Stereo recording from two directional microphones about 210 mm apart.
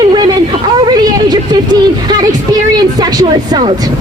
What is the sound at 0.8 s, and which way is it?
A woman's voice, 20° right (ahead or behind).